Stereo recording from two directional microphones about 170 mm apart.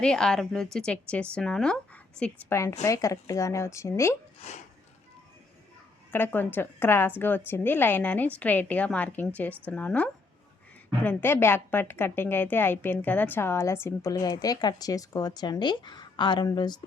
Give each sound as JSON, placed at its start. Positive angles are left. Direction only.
{"t": 0.0, "sound": "a woman's voice", "side_deg": 5}
{"t": 4.4, "sound": "speech", "side_deg": 40}
{"t": 6.1, "sound": "a woman's voice", "side_deg": 10}